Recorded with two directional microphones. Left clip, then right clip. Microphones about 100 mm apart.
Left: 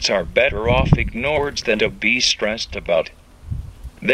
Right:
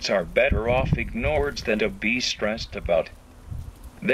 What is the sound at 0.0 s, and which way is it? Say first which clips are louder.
Speech: left 4 dB; 15° left (ahead or behind).